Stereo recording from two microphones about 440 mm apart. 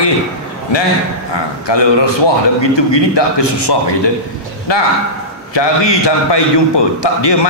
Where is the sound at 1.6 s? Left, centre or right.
Left.